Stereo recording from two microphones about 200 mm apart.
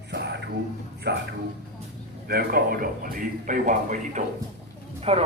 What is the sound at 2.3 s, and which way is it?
A man's voice, 50° right (ahead or behind).